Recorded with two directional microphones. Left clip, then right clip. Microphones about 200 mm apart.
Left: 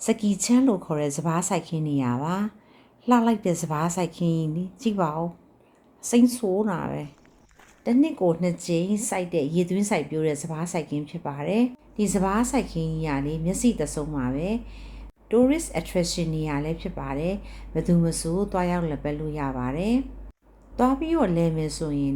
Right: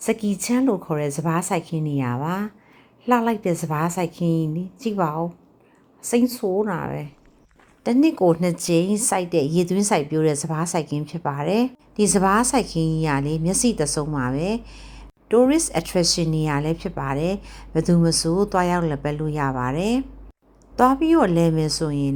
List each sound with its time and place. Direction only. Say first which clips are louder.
0.0 s speech: right 2 dB; 5° right (ahead or behind)
7.9 s speech: right 4 dB; 25° right (ahead or behind)